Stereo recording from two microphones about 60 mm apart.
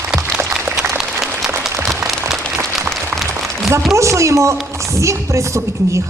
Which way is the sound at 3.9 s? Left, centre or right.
Right.